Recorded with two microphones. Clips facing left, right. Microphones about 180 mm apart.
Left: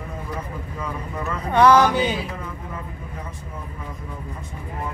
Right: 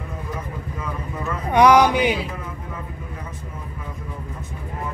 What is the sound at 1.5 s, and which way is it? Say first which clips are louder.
Speech: right 1 dB; 15° right (ahead or behind).